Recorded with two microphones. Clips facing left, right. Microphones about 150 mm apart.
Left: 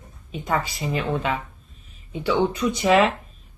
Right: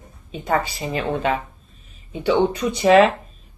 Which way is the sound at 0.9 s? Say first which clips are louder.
Right 3 dB; 35° right (ahead or behind).